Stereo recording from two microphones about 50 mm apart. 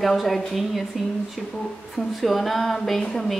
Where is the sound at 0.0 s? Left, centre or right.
Centre.